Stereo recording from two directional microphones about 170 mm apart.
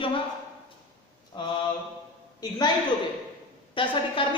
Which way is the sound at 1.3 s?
25° left (ahead or behind).